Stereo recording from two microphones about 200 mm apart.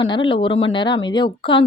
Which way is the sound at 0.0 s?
25° left (ahead or behind).